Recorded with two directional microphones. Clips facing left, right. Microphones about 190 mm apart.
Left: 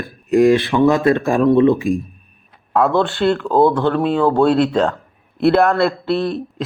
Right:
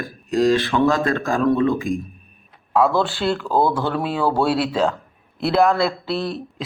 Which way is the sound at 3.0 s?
Centre (ahead or behind).